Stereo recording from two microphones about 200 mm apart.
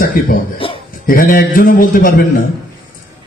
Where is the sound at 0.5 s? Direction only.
25° left (ahead or behind).